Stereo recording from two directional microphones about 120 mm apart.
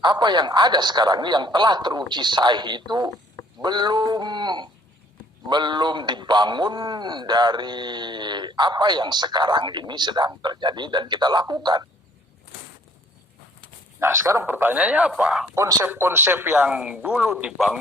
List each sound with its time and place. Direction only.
0.0 s a man's voice: 40° right (ahead or behind)
14.0 s speech: 25° right (ahead or behind); by 15.5 s 5° right (ahead or behind)
15.5 s speech: 25° right (ahead or behind)